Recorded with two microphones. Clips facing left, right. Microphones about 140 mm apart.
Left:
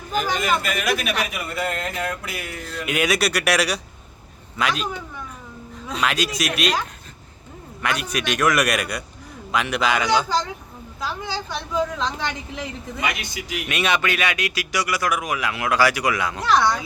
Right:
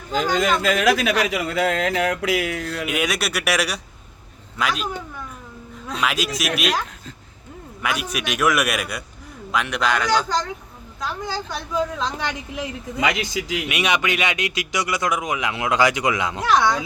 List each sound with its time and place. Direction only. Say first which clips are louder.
0.1 s a man's voice: right 2 dB; 90° right
2.8 s speech: left 4 dB; centre (ahead or behind)
5.9 s speech: even; centre (ahead or behind)
13.0 s a man's voice: right 6 dB; 90° right
13.7 s speech: left 2 dB; 15° right (ahead or behind)